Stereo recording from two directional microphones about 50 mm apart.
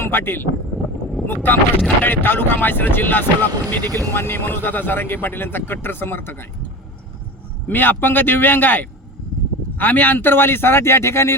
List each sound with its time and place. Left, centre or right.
0.0 s speech: left
7.7 s a man's voice: left